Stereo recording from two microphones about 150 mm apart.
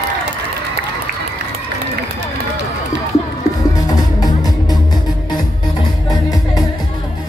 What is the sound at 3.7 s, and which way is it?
Music, 25° left (ahead or behind).